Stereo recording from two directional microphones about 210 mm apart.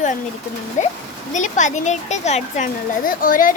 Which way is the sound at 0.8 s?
35° left (ahead or behind).